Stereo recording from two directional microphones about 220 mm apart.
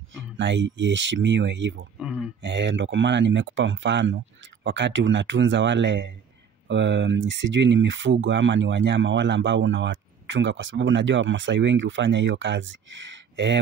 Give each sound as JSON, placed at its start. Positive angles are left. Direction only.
{"t": 0.4, "sound": "speech", "side_deg": -55}
{"t": 2.0, "sound": "a sound", "side_deg": -5}
{"t": 2.4, "sound": "speech", "side_deg": -55}